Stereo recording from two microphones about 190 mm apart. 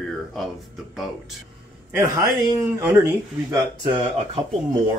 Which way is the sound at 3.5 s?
25° right (ahead or behind).